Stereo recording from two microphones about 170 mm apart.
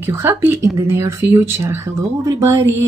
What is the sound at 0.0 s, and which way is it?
Speech, 15° right (ahead or behind).